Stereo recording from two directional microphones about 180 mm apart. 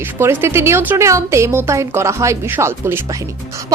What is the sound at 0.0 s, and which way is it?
Speech, 10° right (ahead or behind).